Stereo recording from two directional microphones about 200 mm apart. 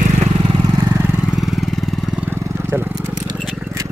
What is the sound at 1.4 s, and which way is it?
Vehicle, centre (ahead or behind).